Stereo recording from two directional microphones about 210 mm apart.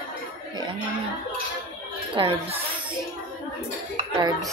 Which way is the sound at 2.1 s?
25° right (ahead or behind).